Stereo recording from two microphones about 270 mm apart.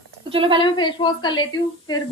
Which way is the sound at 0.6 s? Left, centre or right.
Centre.